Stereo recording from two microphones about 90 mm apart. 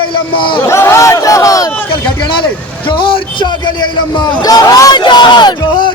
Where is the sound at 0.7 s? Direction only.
30° left (ahead or behind).